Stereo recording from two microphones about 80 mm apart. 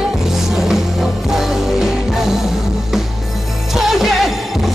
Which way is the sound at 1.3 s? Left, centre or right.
Centre.